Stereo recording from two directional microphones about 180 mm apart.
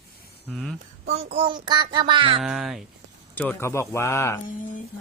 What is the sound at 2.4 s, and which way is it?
A man's voice, centre (ahead or behind).